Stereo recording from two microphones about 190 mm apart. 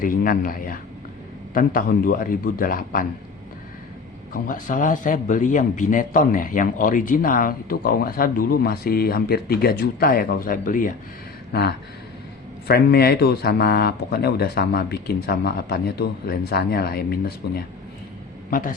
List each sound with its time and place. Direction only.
0.0 s a man's voice: 50° left (ahead or behind)
4.3 s a man's voice: 45° left (ahead or behind)
12.6 s speech: 55° left (ahead or behind)